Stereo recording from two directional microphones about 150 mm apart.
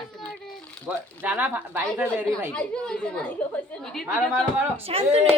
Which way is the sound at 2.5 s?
5° left (ahead or behind).